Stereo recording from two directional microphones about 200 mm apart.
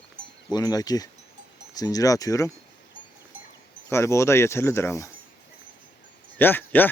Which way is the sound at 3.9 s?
15° left (ahead or behind).